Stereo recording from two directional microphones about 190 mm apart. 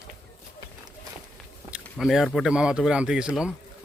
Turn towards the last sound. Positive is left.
turn(degrees=-5)  # may be behind; listen again after turning